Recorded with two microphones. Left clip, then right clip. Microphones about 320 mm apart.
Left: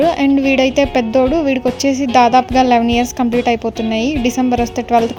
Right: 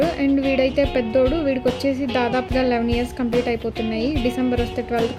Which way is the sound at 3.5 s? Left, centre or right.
Left.